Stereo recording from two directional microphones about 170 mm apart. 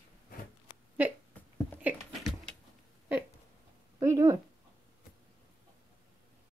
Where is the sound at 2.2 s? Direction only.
Centre (ahead or behind).